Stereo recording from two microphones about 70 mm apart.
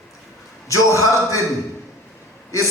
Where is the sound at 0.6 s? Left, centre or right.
Left.